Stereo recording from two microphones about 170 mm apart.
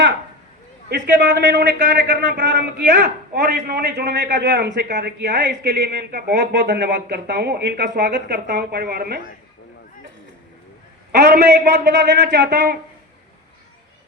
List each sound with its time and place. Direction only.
0.9 s a man's voice: 80° right
11.2 s a man's voice: 75° right (ahead or behind)
12.5 s speech: 70° right (ahead or behind)